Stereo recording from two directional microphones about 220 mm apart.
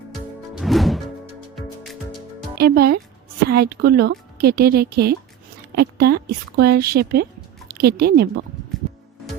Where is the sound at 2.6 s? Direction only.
45° right (ahead or behind).